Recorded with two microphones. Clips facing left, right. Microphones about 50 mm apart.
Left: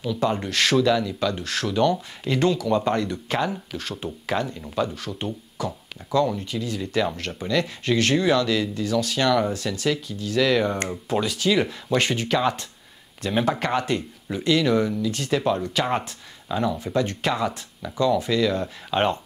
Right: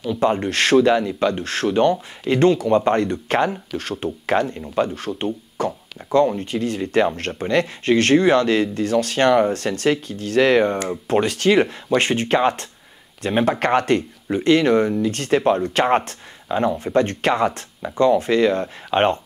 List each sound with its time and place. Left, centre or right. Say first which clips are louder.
0.0 s speech: right 5 dB; right
11.6 s speech: right 4 dB; right
16.4 s speech: right 4 dB; right